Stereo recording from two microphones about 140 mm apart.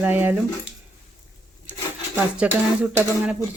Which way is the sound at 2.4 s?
10° right (ahead or behind).